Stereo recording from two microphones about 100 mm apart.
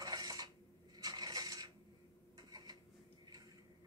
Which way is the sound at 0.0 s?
40° right (ahead or behind).